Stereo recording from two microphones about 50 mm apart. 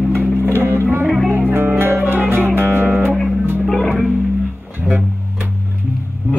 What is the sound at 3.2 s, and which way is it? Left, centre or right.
Music, centre.